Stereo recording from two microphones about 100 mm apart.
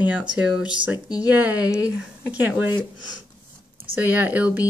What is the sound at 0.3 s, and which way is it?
Speech, 10° right (ahead or behind).